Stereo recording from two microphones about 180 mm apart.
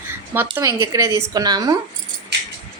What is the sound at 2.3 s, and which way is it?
Keys jangling, 65° right (ahead or behind).